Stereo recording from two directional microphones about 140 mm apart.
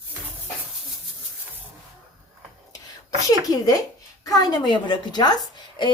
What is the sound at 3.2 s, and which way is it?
A woman's voice, 25° left (ahead or behind).